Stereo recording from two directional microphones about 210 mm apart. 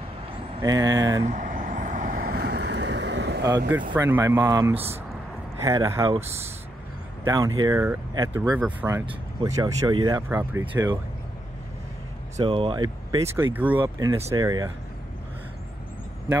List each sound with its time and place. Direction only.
0.6 s speech: 15° right (ahead or behind)
1.2 s vehicle: 35° right (ahead or behind); by 3.4 s 55° right (ahead or behind)
3.9 s speech: 10° right (ahead or behind)
6.1 s speech: 30° right (ahead or behind)
7.2 s speech: 15° right (ahead or behind)
9.0 s speech: 20° right (ahead or behind)
12.4 s speech: 25° right (ahead or behind)
13.4 s speech: 10° right (ahead or behind)